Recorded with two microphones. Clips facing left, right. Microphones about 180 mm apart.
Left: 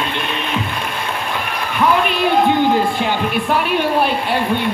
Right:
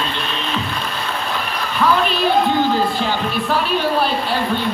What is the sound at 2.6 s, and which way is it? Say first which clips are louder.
Music: left 2 dB; 15° left (ahead or behind).